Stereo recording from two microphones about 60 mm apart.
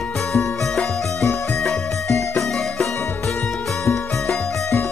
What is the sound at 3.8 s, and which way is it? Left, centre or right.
Music, left.